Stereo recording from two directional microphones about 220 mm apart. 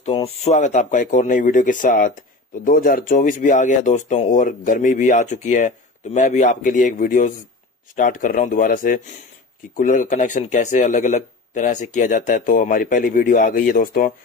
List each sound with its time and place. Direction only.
0.0 s speech: 30° left (ahead or behind)